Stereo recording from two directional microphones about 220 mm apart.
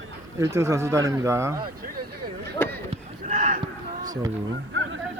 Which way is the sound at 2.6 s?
10° left (ahead or behind).